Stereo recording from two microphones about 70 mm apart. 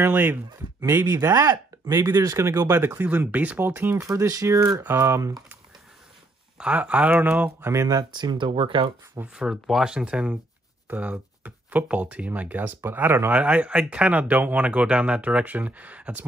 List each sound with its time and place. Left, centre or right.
0.0 s speech: right
2.0 s speech: right
2.3 s speech: right
2.7 s speech: right
4.0 s speech: right
4.8 s speech: right
6.6 s speech: centre
7.7 s speech: right
8.0 s speech: right
9.3 s speech: centre; by 13.3 s right
13.3 s speech: centre